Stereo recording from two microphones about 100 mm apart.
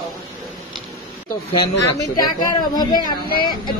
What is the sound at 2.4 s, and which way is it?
Speech, 45° left (ahead or behind).